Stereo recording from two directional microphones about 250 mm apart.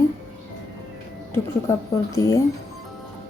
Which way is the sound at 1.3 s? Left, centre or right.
Centre.